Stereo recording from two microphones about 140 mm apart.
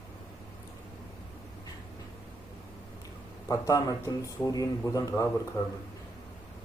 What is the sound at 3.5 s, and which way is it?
A man's voice, 25° left (ahead or behind).